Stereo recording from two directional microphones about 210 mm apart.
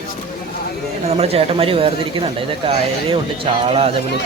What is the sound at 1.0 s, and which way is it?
Speech, 30° right (ahead or behind).